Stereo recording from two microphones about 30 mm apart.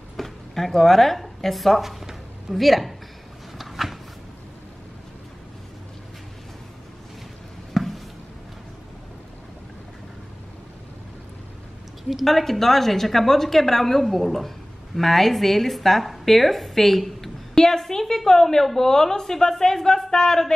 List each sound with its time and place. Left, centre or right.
0.2 s speech: centre
1.8 s a woman's voice: centre
3.5 s a sound: centre
7.7 s a sound: centre
12.0 s a woman's voice: centre
12.3 s a woman's voice: centre